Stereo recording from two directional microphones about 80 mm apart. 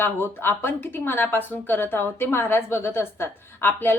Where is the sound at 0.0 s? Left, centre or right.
Left.